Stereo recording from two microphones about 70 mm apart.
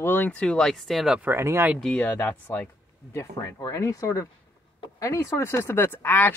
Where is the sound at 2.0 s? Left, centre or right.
Left.